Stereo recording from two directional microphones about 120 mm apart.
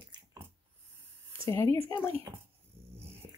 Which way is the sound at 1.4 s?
25° left (ahead or behind).